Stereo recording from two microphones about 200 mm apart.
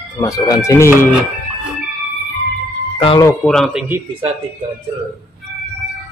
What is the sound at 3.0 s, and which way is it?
Speech, 20° left (ahead or behind).